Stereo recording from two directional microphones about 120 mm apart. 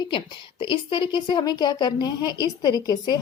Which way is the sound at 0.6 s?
45° left (ahead or behind).